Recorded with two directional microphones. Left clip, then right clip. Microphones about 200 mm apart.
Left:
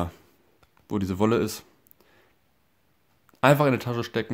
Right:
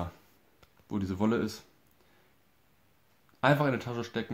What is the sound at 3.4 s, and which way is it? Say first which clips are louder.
Speech: left 7 dB; 45° left (ahead or behind).